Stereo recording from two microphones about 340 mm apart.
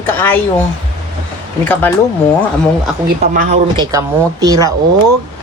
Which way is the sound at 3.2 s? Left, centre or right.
Right.